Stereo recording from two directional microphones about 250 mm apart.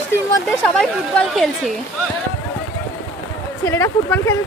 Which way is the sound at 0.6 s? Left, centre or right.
Centre.